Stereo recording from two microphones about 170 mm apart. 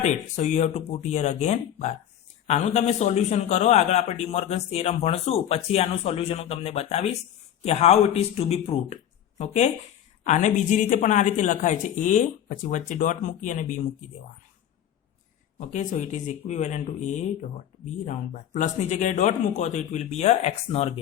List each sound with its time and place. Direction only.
0.0 s a man's voice: 40° left (ahead or behind)
15.5 s speech: 45° left (ahead or behind)